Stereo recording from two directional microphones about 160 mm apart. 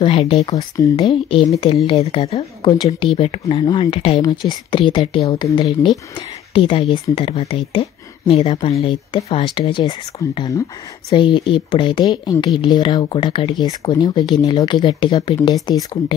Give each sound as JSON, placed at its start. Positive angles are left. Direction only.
{"t": 0.0, "sound": "speech", "side_deg": 35}
{"t": 0.6, "sound": "speech", "side_deg": 20}
{"t": 0.9, "sound": "speech", "side_deg": 35}
{"t": 4.2, "sound": "speech", "side_deg": 25}